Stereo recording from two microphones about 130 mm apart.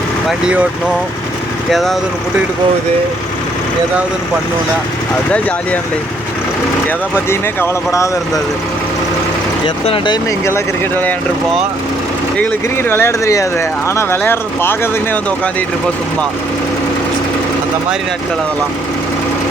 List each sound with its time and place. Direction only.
0.3 s speech: 5° right (ahead or behind)
1.7 s speech: centre (ahead or behind)
5.3 s speech: 10° left (ahead or behind)
6.8 s speech: 20° left (ahead or behind)
9.6 s speech: 40° left (ahead or behind)
10.4 s speech: 15° left (ahead or behind)
12.4 s speech: 15° left (ahead or behind)